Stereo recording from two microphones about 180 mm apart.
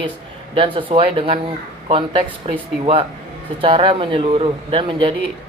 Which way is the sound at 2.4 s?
30° right (ahead or behind).